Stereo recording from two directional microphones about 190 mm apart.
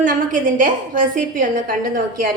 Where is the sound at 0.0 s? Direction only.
45° right (ahead or behind).